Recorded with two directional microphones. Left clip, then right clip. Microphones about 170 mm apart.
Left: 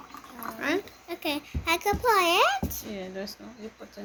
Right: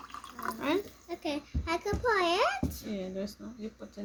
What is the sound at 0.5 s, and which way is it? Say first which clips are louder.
Speech: left 3 dB; 45° right (ahead or behind).